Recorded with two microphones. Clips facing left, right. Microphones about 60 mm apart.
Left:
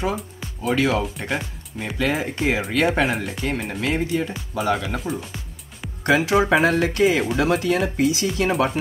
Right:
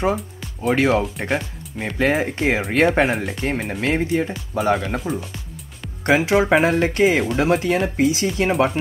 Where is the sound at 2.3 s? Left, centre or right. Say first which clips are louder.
Right 2 dB; right.